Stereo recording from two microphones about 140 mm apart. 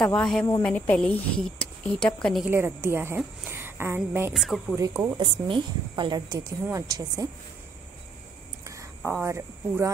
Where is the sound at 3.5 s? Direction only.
15° right (ahead or behind).